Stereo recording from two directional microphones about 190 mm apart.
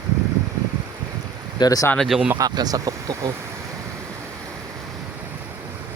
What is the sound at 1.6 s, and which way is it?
Speech, 20° left (ahead or behind).